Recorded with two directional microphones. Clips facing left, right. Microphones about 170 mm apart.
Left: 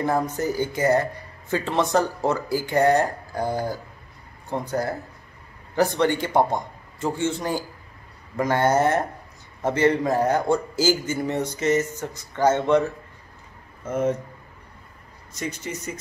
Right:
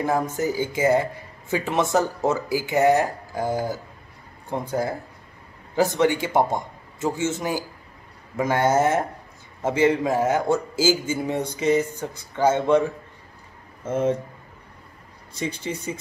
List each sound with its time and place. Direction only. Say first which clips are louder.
0.4 s a man's voice: right 1 dB; 10° right (ahead or behind)
13.8 s speech: right 1 dB; 25° right (ahead or behind)
15.4 s speech: right 2 dB; 30° right (ahead or behind)